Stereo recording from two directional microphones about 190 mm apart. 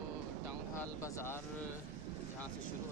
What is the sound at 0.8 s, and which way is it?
Speech, 15° left (ahead or behind).